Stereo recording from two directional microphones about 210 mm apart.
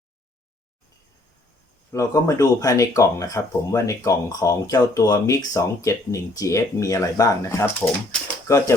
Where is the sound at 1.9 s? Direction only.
15° left (ahead or behind).